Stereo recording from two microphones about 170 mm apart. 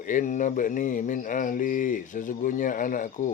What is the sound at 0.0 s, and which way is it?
Speech, 50° left (ahead or behind).